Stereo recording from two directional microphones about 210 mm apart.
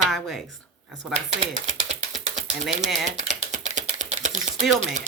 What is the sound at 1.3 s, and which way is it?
Typewriter, 30° right (ahead or behind).